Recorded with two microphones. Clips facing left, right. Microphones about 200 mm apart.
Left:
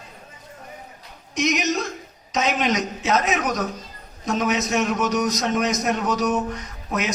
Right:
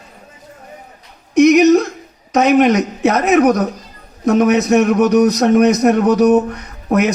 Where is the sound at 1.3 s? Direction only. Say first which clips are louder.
Right 15 dB; 60° right (ahead or behind).